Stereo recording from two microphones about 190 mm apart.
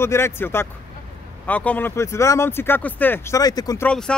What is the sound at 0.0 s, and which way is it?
Speech, 15° left (ahead or behind).